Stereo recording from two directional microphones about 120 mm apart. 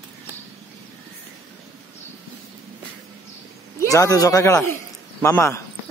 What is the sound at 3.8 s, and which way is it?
Speech, 30° left (ahead or behind).